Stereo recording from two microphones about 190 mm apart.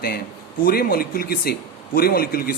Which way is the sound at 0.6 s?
50° left (ahead or behind).